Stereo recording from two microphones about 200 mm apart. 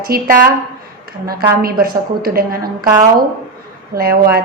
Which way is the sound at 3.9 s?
50° right (ahead or behind).